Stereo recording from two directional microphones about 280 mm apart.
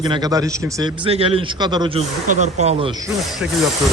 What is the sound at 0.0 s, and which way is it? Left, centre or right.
A man's voice, centre.